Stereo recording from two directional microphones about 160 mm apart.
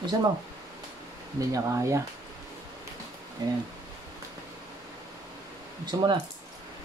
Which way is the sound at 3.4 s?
25° right (ahead or behind).